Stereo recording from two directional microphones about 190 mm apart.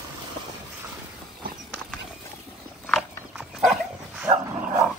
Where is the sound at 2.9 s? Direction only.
Centre (ahead or behind).